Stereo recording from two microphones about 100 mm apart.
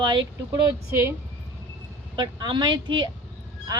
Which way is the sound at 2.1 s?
50° right (ahead or behind).